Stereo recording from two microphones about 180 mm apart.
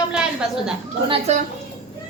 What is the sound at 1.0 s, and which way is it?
Speech, 35° right (ahead or behind).